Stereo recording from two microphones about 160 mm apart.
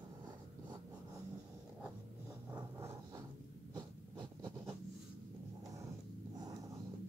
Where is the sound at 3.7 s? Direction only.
25° right (ahead or behind).